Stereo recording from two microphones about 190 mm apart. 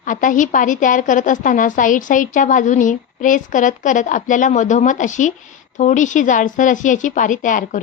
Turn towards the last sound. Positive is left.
turn(degrees=45)  # may be behind; listen again after turning